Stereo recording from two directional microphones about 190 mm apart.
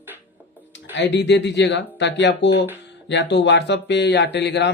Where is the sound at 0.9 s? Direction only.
65° left (ahead or behind).